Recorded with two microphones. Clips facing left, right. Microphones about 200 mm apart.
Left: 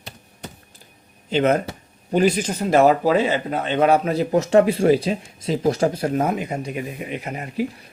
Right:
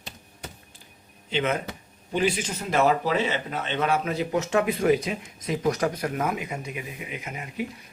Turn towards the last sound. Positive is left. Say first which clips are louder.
# left 7 dB
turn(degrees=35)  # may be behind; listen again after turning